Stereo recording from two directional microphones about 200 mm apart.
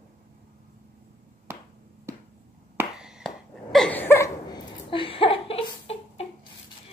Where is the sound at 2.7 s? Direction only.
5° right (ahead or behind).